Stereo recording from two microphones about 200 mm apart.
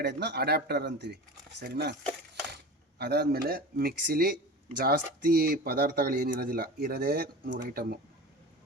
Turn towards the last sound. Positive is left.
turn(degrees=-50)  # may be behind; listen again after turning